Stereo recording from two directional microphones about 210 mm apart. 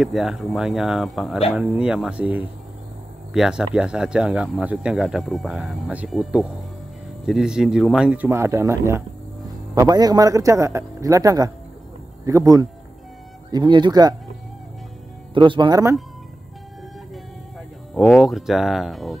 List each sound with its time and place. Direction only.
0.0 s a man's voice: centre (ahead or behind); by 14.1 s 20° right (ahead or behind)
15.3 s speech: 25° right (ahead or behind)
17.9 s speech: centre (ahead or behind)